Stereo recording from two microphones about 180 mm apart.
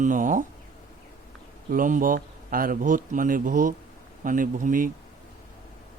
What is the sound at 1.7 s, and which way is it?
A man's voice, 45° right (ahead or behind).